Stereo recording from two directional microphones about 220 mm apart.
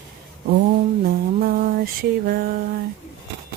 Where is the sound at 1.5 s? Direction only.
40° right (ahead or behind).